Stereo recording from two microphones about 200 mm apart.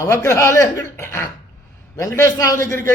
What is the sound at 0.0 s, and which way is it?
A man's voice, 15° left (ahead or behind).